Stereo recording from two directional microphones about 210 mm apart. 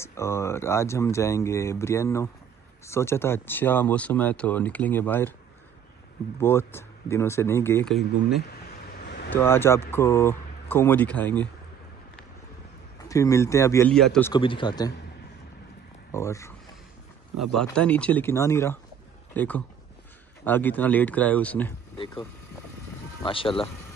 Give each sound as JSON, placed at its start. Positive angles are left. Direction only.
{"t": 0.0, "sound": "speech", "side_deg": 10}
{"t": 6.4, "sound": "speech", "side_deg": 10}
{"t": 9.0, "sound": "vehicle", "side_deg": 55}
{"t": 9.3, "sound": "speech", "side_deg": 10}
{"t": 13.1, "sound": "speech", "side_deg": 15}
{"t": 13.9, "sound": "speech", "side_deg": 5}
{"t": 14.3, "sound": "speech", "side_deg": 25}
{"t": 16.1, "sound": "speech", "side_deg": 15}
{"t": 17.6, "sound": "a man's voice", "side_deg": 5}
{"t": 21.9, "sound": "speech", "side_deg": 25}
{"t": 23.2, "sound": "speech", "side_deg": 25}